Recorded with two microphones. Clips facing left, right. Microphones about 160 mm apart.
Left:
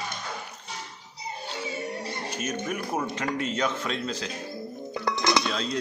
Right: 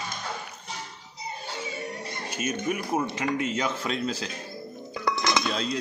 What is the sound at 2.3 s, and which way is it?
A man's voice, 5° right (ahead or behind).